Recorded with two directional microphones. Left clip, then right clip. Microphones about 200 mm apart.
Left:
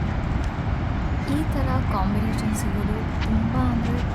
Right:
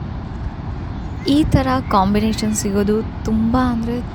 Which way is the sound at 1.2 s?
40° right (ahead or behind).